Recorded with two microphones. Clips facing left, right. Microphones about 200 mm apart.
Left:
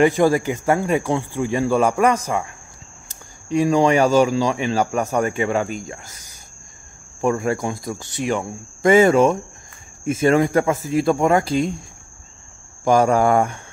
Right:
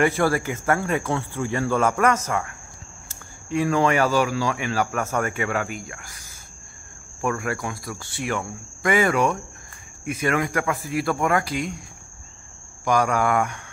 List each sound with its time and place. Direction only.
0.0 s speech: 15° left (ahead or behind)
12.8 s speech: 25° left (ahead or behind)